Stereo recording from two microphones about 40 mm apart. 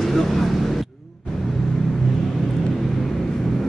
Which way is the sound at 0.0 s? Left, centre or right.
Centre.